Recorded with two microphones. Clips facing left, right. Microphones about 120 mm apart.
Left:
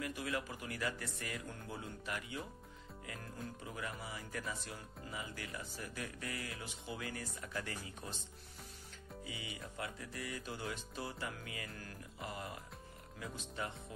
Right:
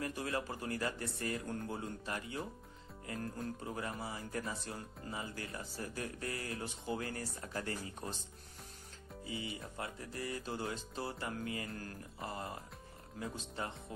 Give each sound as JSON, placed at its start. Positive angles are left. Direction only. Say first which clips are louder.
{"t": 0.0, "sound": "speech", "louder": "right 2 dB", "side_deg": -35}
{"t": 3.6, "sound": "speech", "louder": "right 2 dB", "side_deg": -35}
{"t": 9.2, "sound": "speech", "louder": "right 5 dB", "side_deg": -30}